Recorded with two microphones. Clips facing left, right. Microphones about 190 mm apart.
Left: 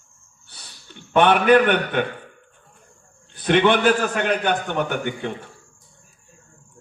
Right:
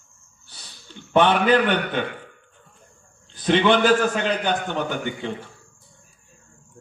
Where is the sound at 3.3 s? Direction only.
60° left (ahead or behind).